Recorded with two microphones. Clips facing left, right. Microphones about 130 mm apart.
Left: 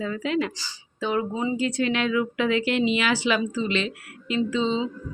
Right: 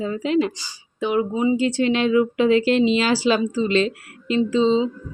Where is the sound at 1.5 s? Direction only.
25° right (ahead or behind).